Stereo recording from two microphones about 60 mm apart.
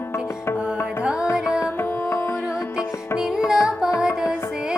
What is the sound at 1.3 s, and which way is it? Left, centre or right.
Music, left.